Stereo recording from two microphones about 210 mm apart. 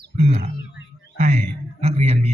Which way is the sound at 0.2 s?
30° right (ahead or behind).